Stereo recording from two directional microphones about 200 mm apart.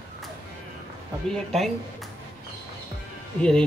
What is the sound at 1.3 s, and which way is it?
Speech, centre (ahead or behind).